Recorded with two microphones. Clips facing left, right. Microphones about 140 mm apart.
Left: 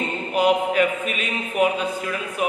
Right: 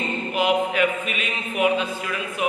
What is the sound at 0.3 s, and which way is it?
A man's voice, 40° left (ahead or behind).